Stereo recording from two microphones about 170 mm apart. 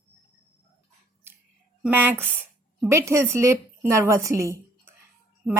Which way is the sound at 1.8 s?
10° right (ahead or behind).